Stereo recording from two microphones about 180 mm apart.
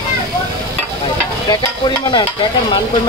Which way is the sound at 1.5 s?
25° left (ahead or behind).